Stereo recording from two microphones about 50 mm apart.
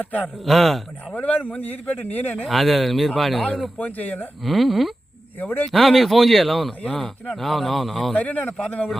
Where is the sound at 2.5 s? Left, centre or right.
Centre.